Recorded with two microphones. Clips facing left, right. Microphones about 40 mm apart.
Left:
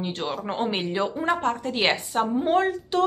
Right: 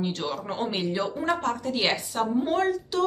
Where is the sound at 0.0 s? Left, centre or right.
Left.